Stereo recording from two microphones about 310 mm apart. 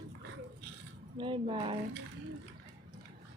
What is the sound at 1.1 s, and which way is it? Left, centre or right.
Speech, centre.